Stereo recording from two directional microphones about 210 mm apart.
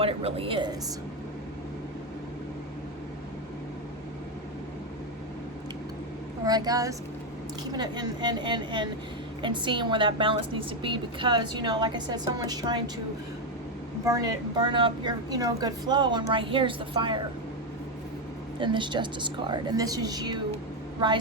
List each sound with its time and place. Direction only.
0.0 s a woman's voice: 25° right (ahead or behind)
6.4 s a woman's voice: 20° right (ahead or behind)
14.0 s a woman's voice: 15° right (ahead or behind)
18.6 s a woman's voice: 20° right (ahead or behind)